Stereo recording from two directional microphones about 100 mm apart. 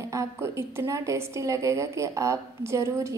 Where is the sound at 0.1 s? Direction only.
30° right (ahead or behind).